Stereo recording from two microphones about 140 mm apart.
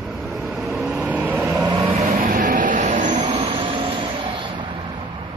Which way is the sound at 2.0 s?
70° right (ahead or behind).